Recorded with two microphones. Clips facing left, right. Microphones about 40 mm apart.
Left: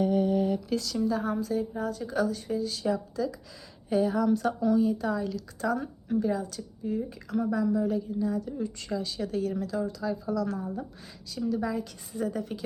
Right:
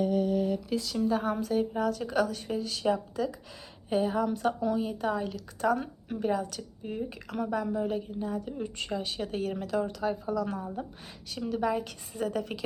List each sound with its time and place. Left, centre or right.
0.0 s a sound: centre
0.8 s speech: right
1.0 s speech: right
1.7 s speech: right
3.8 s speech: right
4.8 s speech: right
5.7 s a woman's voice: right
10.3 s speech: right
11.3 s speech: right